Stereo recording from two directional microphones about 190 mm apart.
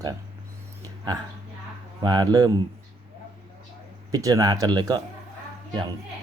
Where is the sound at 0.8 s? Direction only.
20° right (ahead or behind).